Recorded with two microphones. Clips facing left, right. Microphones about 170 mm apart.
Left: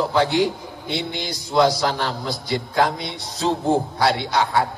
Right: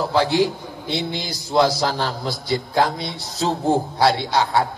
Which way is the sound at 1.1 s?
30° right (ahead or behind).